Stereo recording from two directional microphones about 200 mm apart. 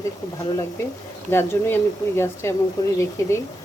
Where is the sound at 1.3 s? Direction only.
10° left (ahead or behind).